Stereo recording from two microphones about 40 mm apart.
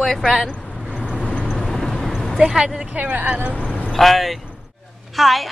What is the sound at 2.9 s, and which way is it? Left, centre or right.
Speech, right.